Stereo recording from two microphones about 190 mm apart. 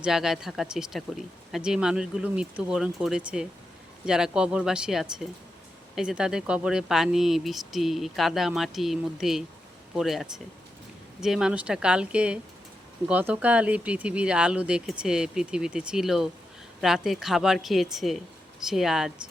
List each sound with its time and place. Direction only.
0.0 s speech: centre (ahead or behind)